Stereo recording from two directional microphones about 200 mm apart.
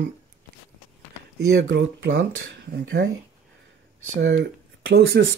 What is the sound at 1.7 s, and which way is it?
Speech, 65° right (ahead or behind).